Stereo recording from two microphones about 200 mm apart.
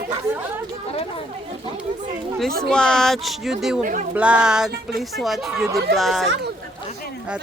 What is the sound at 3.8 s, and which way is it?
Speech, 40° right (ahead or behind).